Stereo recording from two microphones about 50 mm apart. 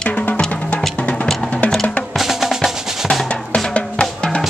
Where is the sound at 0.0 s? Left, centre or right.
Left.